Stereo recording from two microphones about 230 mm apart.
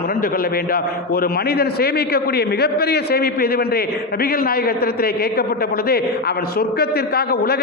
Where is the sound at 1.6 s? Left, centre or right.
Left.